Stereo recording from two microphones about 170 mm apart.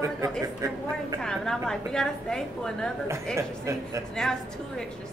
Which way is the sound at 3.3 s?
15° right (ahead or behind).